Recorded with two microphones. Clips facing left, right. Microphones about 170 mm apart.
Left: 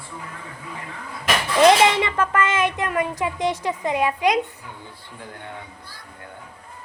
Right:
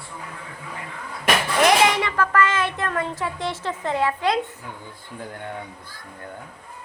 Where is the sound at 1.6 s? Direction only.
25° left (ahead or behind).